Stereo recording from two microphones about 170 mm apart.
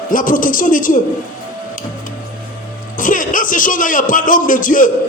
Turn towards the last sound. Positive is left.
turn(degrees=50)  # may be behind; listen again after turning